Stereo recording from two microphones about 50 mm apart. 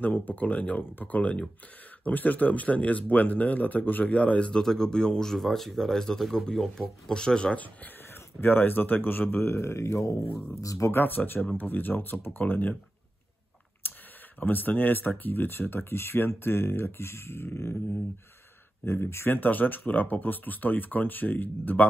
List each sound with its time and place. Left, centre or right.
0.0 s speech: left; by 7.5 s centre
7.5 s speech: left
10.9 s speech: left
13.8 s a sound: left
14.4 s speech: left
18.9 s speech: left
19.3 s speech: left